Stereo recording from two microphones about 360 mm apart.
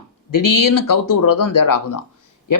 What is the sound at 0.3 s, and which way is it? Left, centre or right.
A man's voice, left.